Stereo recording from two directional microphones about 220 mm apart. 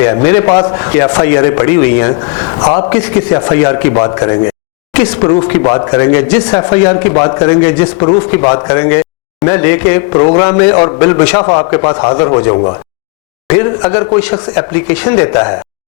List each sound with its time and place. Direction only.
0.0 s a man's voice: 15° left (ahead or behind)
5.6 s a man's voice: 20° left (ahead or behind)